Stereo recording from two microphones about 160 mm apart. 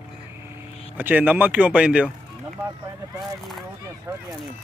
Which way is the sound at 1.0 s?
10° right (ahead or behind).